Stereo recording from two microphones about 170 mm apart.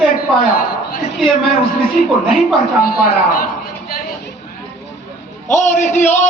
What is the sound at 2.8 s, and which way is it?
Speech, 60° left (ahead or behind).